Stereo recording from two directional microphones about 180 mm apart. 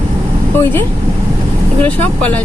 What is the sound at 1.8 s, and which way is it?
Speech, 10° left (ahead or behind).